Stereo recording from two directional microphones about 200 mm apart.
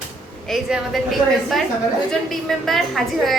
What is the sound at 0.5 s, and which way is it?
A woman's voice, centre (ahead or behind).